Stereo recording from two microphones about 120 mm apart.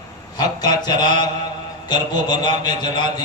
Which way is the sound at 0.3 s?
35° left (ahead or behind).